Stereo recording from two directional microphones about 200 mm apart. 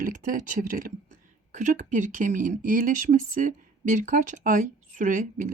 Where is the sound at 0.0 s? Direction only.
40° right (ahead or behind).